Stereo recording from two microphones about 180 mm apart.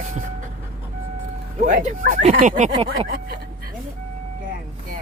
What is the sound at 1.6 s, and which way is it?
Speech, 50° right (ahead or behind).